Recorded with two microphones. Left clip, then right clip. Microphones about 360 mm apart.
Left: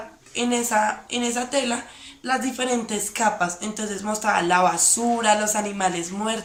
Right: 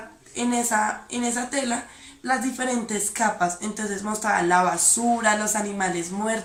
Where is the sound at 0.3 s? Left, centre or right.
Centre.